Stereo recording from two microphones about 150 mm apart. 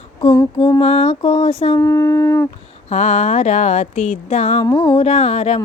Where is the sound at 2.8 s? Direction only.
50° left (ahead or behind).